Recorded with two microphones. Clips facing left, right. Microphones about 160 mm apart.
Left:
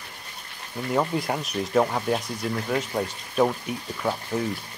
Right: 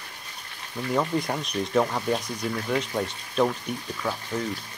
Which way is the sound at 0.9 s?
5° left (ahead or behind).